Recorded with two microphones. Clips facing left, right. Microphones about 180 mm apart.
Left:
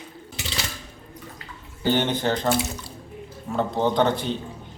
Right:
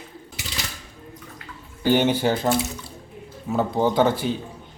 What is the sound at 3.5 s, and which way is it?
Speech, 5° right (ahead or behind).